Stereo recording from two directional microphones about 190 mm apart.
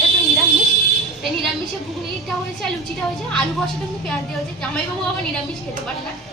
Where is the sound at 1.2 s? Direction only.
Centre (ahead or behind).